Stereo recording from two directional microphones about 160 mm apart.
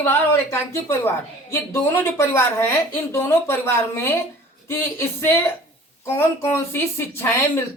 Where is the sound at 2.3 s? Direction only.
15° left (ahead or behind).